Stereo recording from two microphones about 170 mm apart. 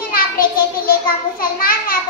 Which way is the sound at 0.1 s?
60° left (ahead or behind).